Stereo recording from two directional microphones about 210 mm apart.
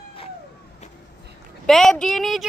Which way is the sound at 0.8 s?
35° left (ahead or behind).